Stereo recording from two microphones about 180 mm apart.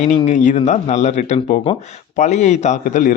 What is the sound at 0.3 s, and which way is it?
A man's voice, 40° left (ahead or behind).